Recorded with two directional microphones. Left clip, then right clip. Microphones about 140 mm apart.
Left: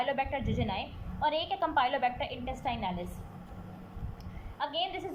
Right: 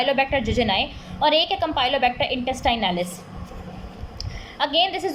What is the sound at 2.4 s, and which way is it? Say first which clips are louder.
Speech: right 12 dB; 45° right (ahead or behind).